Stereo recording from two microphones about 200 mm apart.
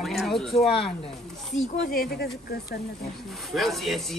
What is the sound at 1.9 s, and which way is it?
Speech, 50° left (ahead or behind).